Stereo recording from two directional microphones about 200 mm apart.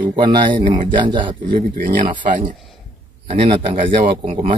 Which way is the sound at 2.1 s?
40° right (ahead or behind).